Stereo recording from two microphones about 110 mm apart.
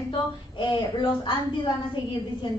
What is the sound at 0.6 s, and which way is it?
Speech, 50° left (ahead or behind).